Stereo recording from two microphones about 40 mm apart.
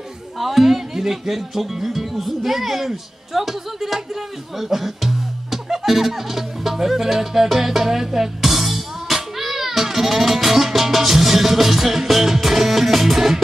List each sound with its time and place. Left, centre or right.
0.4 s speech: centre